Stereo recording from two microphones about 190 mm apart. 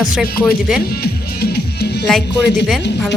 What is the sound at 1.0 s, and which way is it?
Music, 55° left (ahead or behind).